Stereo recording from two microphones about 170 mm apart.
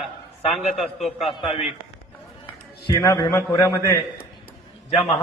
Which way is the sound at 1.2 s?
30° left (ahead or behind).